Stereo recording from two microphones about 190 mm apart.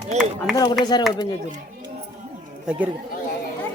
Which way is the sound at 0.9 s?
25° left (ahead or behind).